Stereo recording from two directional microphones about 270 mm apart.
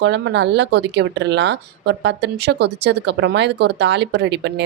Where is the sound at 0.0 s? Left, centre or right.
Right.